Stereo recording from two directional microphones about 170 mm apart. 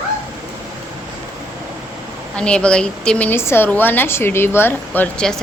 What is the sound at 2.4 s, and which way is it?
A woman's voice, 5° left (ahead or behind).